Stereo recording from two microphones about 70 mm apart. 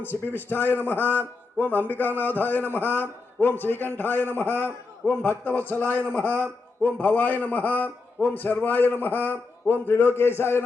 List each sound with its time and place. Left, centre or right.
0.0 s a man's voice: left